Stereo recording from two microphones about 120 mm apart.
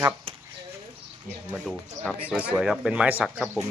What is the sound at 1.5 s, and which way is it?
Speech, 5° left (ahead or behind).